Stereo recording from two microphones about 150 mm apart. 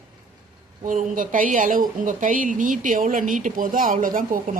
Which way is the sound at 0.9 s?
60° right (ahead or behind).